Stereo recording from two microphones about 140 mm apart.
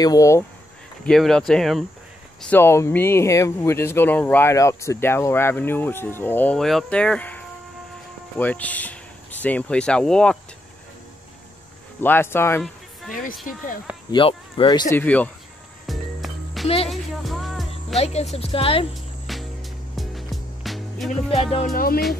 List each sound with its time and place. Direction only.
0.0 s speech: 25° left (ahead or behind)
1.0 s speech: 5° left (ahead or behind)
2.5 s speech: 15° left (ahead or behind)
12.0 s speech: 15° left (ahead or behind)
14.1 s speech: 35° left (ahead or behind)
15.0 s speech: 10° left (ahead or behind)
15.9 s music: centre (ahead or behind)
16.6 s speech: 45° left (ahead or behind)
16.9 s music: centre (ahead or behind)
17.9 s speech: 50° left (ahead or behind)
19.3 s music: centre (ahead or behind)
21.4 s speech: 40° left (ahead or behind)
21.7 s music: 90° left